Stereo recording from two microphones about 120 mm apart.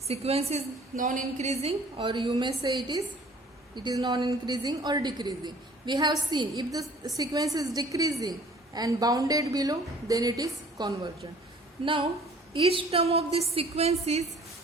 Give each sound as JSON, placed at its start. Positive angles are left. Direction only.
{"t": 0.1, "sound": "a woman's voice", "side_deg": -60}
{"t": 1.0, "sound": "a woman's voice", "side_deg": -80}
{"t": 2.0, "sound": "a woman's voice", "side_deg": -40}
{"t": 12.5, "sound": "a woman's voice", "side_deg": -50}